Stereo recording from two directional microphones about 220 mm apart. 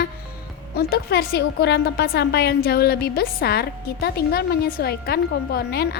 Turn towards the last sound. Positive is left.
turn(degrees=45)  # may be behind; listen again after turning